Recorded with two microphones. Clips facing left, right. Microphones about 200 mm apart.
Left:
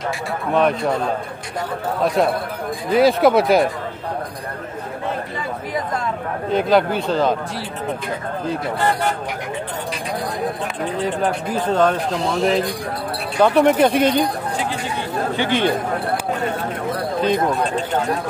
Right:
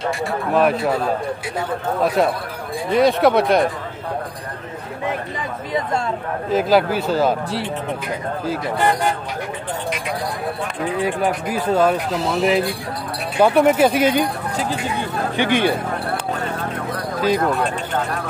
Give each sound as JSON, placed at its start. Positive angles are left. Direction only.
{"t": 0.1, "sound": "speech", "side_deg": -5}
{"t": 2.0, "sound": "speech", "side_deg": 0}
{"t": 6.5, "sound": "speech", "side_deg": -5}
{"t": 11.0, "sound": "a man's voice", "side_deg": -10}
{"t": 15.3, "sound": "a man's voice", "side_deg": -15}
{"t": 17.4, "sound": "speech", "side_deg": 15}